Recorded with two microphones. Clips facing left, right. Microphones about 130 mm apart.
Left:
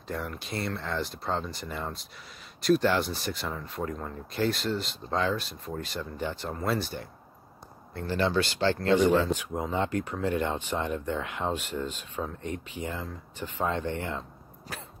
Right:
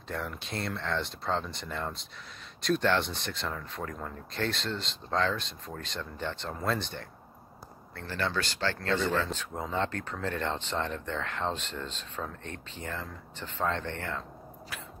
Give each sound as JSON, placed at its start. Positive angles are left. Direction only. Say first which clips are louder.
{"t": 0.1, "sound": "speech", "louder": "left 2 dB", "side_deg": 0}
{"t": 7.9, "sound": "speech", "louder": "left 6 dB", "side_deg": 20}
{"t": 14.7, "sound": "cough", "louder": "left 3 dB", "side_deg": 35}